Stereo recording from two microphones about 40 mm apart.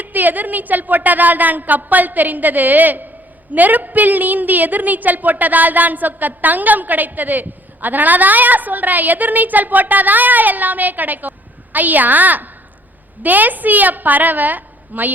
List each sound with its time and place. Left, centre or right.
0.0 s a woman's voice: right